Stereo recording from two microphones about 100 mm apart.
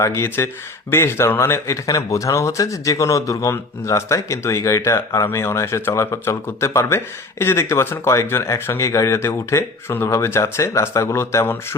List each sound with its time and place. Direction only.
0.0 s speech: 25° left (ahead or behind)